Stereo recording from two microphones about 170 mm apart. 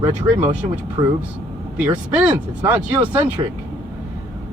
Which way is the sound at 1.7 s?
10° right (ahead or behind).